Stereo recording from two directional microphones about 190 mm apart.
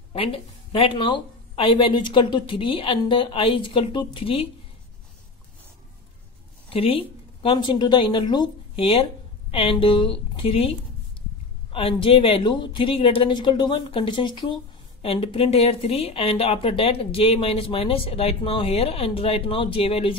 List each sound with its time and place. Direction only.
0.1 s speech: 30° left (ahead or behind)
6.7 s a woman's voice: 30° left (ahead or behind)
11.7 s speech: 30° left (ahead or behind)